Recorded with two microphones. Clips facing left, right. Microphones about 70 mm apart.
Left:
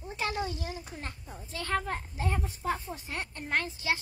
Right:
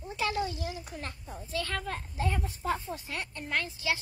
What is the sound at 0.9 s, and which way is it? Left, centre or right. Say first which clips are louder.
Speech: right 1 dB; left.